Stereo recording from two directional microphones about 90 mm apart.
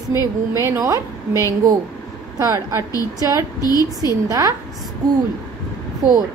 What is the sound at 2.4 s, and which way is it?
Speech, 40° right (ahead or behind).